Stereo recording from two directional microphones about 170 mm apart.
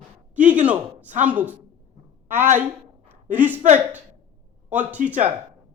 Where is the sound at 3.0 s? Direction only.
10° right (ahead or behind).